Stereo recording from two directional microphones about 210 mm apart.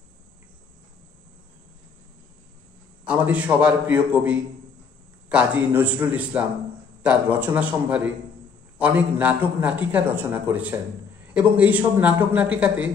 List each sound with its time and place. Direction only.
3.1 s a man's voice: 5° right (ahead or behind)